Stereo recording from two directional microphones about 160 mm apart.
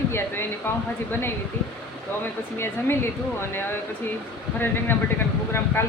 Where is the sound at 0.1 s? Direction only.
15° left (ahead or behind).